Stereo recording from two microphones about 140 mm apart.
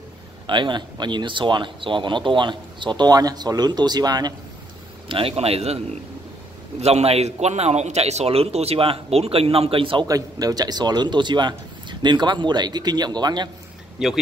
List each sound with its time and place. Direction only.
0.5 s speech: 35° right (ahead or behind)
5.0 s a man's voice: 40° right (ahead or behind)
6.8 s a man's voice: 50° right (ahead or behind)
10.0 s speech: 25° right (ahead or behind)
13.9 s speech: centre (ahead or behind)